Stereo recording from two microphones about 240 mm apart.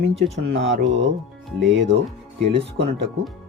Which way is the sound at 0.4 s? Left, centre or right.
Right.